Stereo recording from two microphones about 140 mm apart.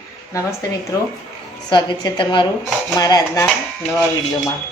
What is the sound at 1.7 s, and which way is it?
A woman's voice, 35° left (ahead or behind).